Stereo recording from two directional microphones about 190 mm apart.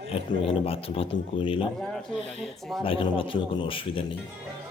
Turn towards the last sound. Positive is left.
turn(degrees=25)  # may be behind; listen again after turning